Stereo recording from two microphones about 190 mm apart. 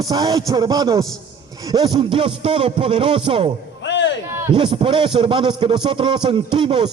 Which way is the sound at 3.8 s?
70° left (ahead or behind).